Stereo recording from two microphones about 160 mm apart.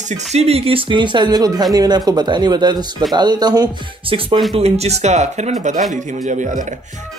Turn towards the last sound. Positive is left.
turn(degrees=-50)  # may be behind; listen again after turning